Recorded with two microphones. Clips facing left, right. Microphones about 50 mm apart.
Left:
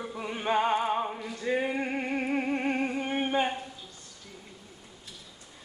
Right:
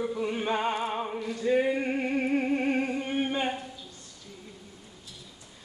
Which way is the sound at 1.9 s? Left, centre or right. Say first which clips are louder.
Right 3 dB; centre.